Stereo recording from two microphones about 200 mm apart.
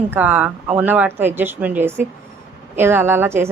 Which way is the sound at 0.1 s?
10° right (ahead or behind).